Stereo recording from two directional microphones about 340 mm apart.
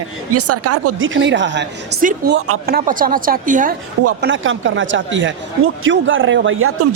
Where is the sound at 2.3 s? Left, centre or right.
Right.